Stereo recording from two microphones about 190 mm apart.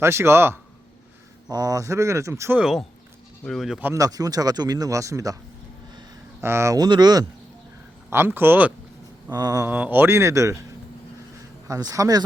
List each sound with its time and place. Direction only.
0.0 s speech: 15° right (ahead or behind)
8.1 s speech: 10° right (ahead or behind)
9.3 s speech: 20° right (ahead or behind)
11.7 s speech: 20° right (ahead or behind)